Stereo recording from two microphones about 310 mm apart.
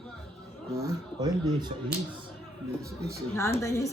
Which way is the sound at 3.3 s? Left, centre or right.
Centre.